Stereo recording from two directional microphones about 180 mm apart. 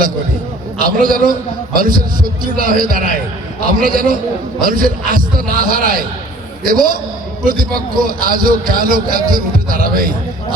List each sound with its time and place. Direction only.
0.8 s a man's voice: 50° right (ahead or behind)
8.0 s a man's voice: 50° right (ahead or behind)